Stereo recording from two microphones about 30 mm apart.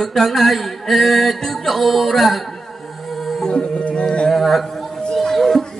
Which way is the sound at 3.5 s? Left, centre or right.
Left.